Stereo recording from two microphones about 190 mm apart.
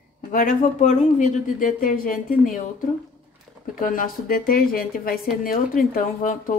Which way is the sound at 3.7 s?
45° left (ahead or behind).